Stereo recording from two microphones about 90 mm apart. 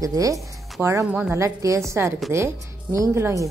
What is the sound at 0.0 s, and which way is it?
Speech, 40° right (ahead or behind).